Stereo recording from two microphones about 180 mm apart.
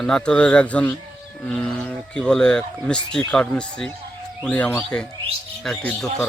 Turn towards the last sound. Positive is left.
turn(degrees=5)  # may be behind; listen again after turning